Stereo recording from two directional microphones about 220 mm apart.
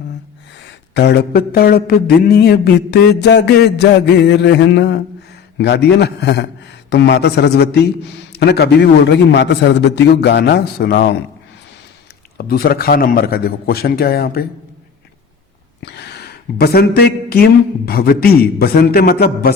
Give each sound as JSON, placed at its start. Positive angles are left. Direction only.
{"t": 0.9, "sound": "a man's voice", "side_deg": 50}
{"t": 12.4, "sound": "a man's voice", "side_deg": 45}
{"t": 15.8, "sound": "a man's voice", "side_deg": 50}